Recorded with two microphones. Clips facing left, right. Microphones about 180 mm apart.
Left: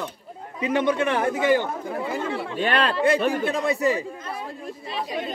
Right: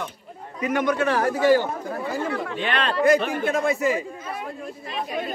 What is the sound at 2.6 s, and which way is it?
Speech, 40° left (ahead or behind).